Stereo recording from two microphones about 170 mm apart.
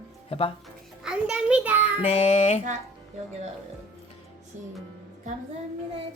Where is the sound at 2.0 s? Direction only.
35° left (ahead or behind).